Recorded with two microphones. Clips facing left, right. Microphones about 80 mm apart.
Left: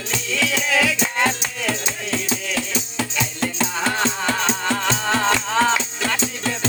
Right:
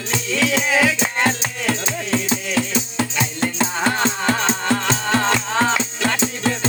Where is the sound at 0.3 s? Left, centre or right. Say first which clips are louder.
Right 2 dB; right.